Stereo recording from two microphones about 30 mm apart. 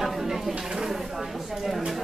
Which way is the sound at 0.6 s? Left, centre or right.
Centre.